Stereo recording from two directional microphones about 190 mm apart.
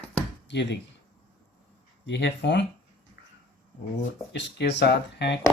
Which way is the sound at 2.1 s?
65° left (ahead or behind).